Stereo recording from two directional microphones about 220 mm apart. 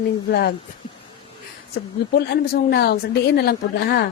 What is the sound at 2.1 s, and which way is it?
A woman's voice, 45° left (ahead or behind).